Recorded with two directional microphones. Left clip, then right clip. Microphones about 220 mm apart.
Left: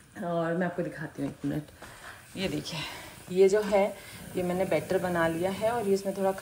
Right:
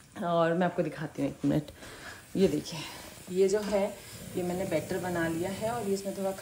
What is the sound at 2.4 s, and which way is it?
Speech, 15° right (ahead or behind).